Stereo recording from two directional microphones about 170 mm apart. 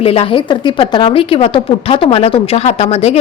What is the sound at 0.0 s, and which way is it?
A woman's voice, 35° left (ahead or behind).